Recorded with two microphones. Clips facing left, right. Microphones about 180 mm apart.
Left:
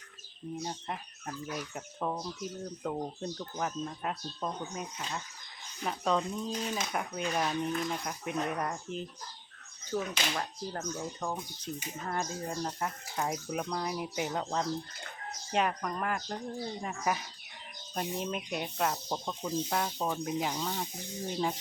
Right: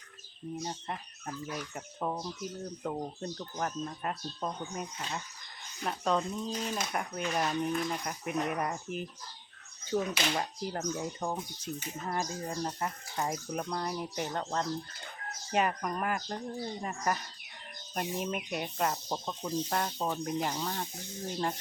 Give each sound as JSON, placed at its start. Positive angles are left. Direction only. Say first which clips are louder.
{"t": 0.6, "sound": "speech", "louder": "even", "side_deg": 0}
{"t": 9.9, "sound": "speech", "louder": "right 3 dB", "side_deg": -20}
{"t": 12.0, "sound": "speech", "louder": "even", "side_deg": 0}
{"t": 15.5, "sound": "speech", "louder": "right 1 dB", "side_deg": -5}